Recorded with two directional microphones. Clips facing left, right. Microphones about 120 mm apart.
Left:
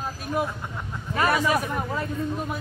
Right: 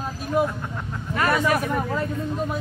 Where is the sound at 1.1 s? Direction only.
15° left (ahead or behind).